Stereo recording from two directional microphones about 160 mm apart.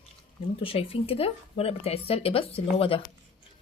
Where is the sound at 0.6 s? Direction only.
35° left (ahead or behind).